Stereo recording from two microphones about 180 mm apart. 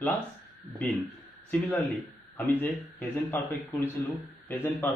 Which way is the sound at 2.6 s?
10° left (ahead or behind).